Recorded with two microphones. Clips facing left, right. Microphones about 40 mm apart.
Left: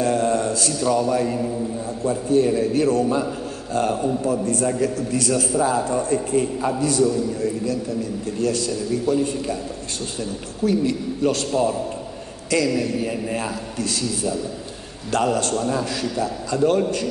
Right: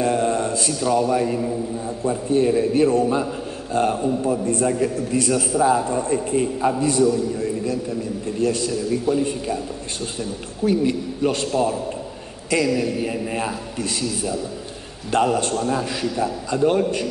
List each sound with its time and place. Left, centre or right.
0.0 s mantra: right
0.8 s a man's voice: centre
2.0 s a man's voice: right
8.4 s a man's voice: right
10.6 s a man's voice: right
12.4 s a man's voice: centre
15.5 s a man's voice: centre
15.8 s a man's voice: right